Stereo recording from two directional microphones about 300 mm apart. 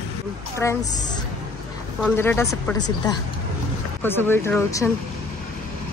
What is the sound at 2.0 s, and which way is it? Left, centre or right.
Speech, centre.